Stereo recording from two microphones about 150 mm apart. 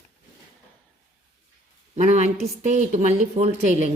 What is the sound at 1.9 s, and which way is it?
A woman's voice, 50° right (ahead or behind).